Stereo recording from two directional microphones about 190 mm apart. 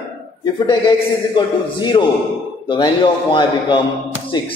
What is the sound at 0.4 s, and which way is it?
A man's voice, 25° left (ahead or behind).